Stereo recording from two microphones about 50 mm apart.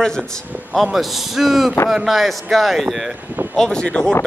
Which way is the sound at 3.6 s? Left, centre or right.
Centre.